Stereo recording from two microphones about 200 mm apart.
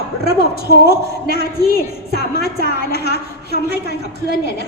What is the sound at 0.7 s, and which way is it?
A woman's voice, 50° left (ahead or behind).